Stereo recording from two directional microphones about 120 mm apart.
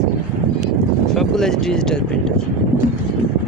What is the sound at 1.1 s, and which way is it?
Speech, 5° left (ahead or behind).